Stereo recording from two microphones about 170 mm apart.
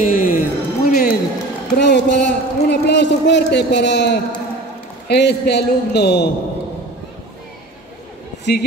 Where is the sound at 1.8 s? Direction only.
85° left.